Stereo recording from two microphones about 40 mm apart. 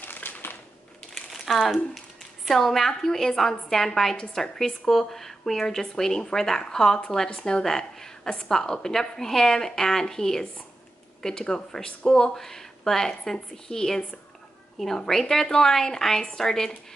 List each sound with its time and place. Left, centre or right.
0.0 s a sound: left
1.5 s speech: centre
2.4 s a woman's voice: centre
15.0 s speech: centre